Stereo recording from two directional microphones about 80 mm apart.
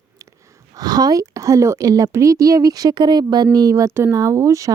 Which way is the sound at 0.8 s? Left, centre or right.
Right.